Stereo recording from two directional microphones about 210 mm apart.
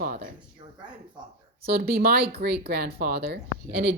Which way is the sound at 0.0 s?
40° right (ahead or behind).